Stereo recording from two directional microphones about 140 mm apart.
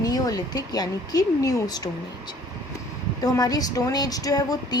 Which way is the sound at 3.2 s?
25° left (ahead or behind).